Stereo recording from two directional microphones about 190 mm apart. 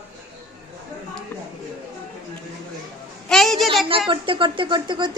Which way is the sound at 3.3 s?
Centre (ahead or behind).